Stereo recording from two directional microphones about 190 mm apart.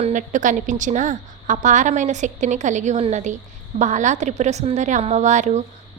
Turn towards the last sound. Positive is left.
turn(degrees=-40)  # may be behind; listen again after turning